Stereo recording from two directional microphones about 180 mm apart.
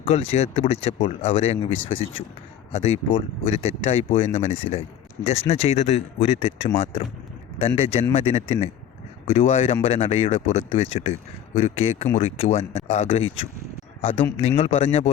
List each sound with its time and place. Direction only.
0.0 s speech: 35° left (ahead or behind)